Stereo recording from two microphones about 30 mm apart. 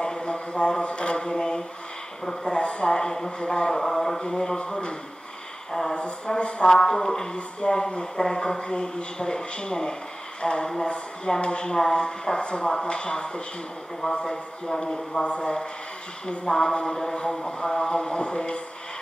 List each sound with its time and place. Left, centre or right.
0.0 s a sound: left
0.8 s mantra: left
2.4 s a man's voice: left
5.7 s a man's voice: centre
5.9 s speech: left
6.7 s a man's voice: left
7.6 s speech: left
8.2 s a man's voice: left
14.8 s speech: centre
15.2 s speech: left
16.4 s a man's voice: left